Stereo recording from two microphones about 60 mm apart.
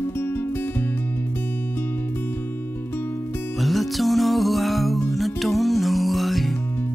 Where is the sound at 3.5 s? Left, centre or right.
Centre.